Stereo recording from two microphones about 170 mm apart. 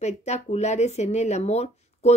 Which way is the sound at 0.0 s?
40° left (ahead or behind).